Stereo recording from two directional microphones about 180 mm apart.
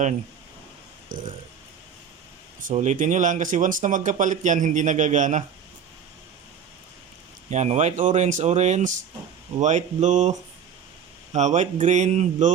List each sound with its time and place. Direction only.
1.1 s speech: 50° right (ahead or behind)
2.7 s speech: 45° right (ahead or behind)
7.5 s speech: 40° right (ahead or behind)
11.3 s speech: 40° right (ahead or behind)